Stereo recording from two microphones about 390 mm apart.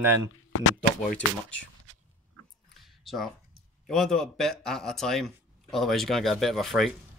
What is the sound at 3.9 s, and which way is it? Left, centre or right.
Speech, centre.